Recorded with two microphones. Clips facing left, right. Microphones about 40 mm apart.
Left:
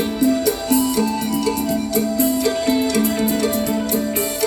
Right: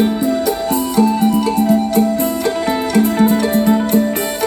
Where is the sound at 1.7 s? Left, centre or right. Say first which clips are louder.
Right 6 dB; right.